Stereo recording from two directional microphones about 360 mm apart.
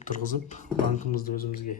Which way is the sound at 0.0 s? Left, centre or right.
Left.